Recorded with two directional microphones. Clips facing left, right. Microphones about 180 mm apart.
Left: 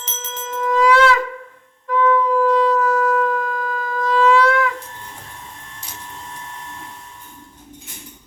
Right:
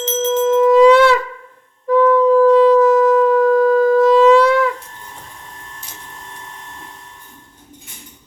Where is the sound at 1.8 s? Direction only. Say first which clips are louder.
Right 6 dB; 35° right (ahead or behind).